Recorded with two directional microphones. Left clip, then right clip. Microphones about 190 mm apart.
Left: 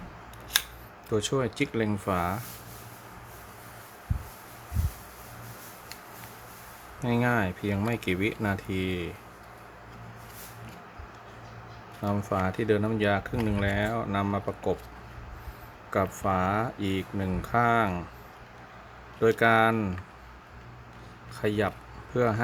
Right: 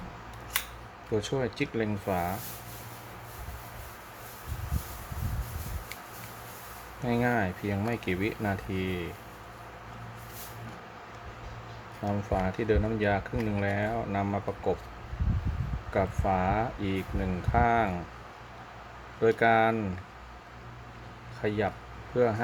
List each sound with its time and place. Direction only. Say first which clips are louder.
1.1 s speech: left 2 dB; 20° left (ahead or behind)
7.0 s speech: left 1 dB; 20° left (ahead or behind)
12.0 s speech: left 2 dB; 25° left (ahead or behind)
15.9 s speech: left 1 dB; 20° left (ahead or behind)
19.2 s speech: left 1 dB; 20° left (ahead or behind)
21.4 s speech: left 2 dB; 20° left (ahead or behind)